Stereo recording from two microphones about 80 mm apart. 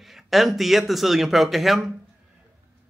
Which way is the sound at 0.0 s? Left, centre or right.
Centre.